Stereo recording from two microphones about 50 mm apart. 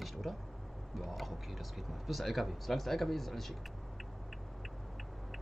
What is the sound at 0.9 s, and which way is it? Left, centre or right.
Speech, centre.